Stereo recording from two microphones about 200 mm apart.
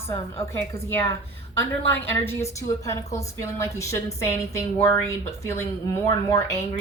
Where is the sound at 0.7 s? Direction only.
15° left (ahead or behind).